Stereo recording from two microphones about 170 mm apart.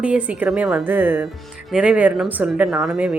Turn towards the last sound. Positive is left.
turn(degrees=-5)  # may be behind; listen again after turning